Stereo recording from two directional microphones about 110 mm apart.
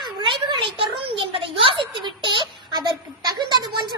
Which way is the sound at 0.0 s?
45° right (ahead or behind).